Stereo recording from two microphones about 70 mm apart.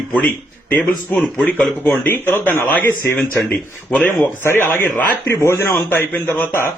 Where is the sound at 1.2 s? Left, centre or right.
Centre.